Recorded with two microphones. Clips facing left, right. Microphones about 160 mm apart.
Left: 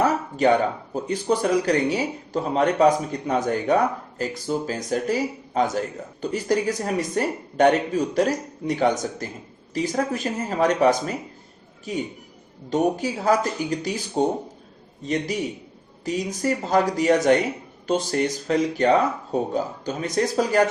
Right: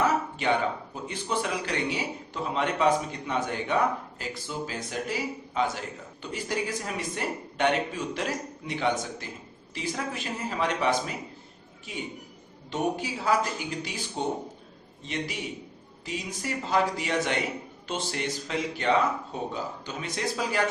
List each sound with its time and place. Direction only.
0.0 s speech: 40° left (ahead or behind)